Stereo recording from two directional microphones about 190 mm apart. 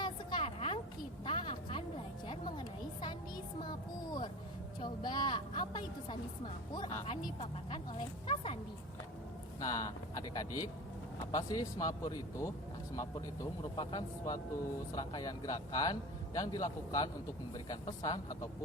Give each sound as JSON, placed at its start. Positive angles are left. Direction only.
{"t": 0.0, "sound": "a sound", "side_deg": 25}
{"t": 2.2, "sound": "music", "side_deg": 25}
{"t": 4.8, "sound": "vehicle", "side_deg": 25}
{"t": 6.7, "sound": "a man's voice", "side_deg": 25}
{"t": 9.6, "sound": "a sound", "side_deg": 20}
{"t": 11.3, "sound": "a man's voice", "side_deg": 20}